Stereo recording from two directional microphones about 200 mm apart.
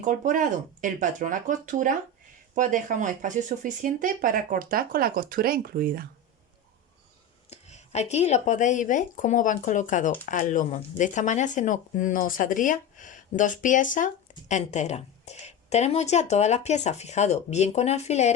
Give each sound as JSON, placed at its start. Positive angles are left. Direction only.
{"t": 0.0, "sound": "speech", "side_deg": -40}
{"t": 7.5, "sound": "speech", "side_deg": 35}